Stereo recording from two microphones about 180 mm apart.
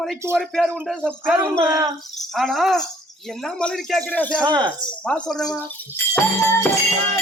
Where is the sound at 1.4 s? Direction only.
20° right (ahead or behind).